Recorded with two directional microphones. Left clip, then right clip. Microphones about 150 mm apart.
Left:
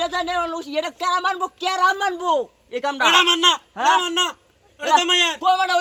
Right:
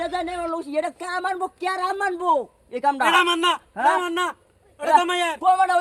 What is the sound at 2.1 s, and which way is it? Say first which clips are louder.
Speech: even; 35° right (ahead or behind).